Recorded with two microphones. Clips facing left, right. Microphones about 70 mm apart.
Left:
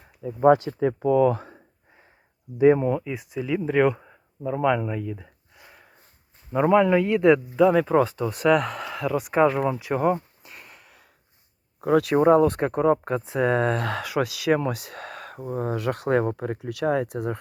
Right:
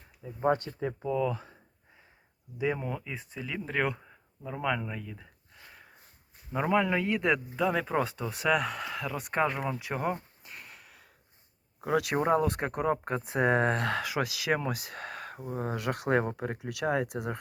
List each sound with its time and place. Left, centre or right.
0.2 s speech: left
2.6 s speech: left
2.9 s speech: centre
3.9 s a sound: left
6.5 s speech: centre
10.4 s a sound: centre
11.9 s speech: centre